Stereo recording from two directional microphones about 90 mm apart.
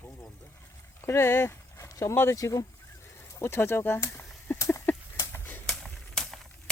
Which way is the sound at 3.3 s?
30° left (ahead or behind).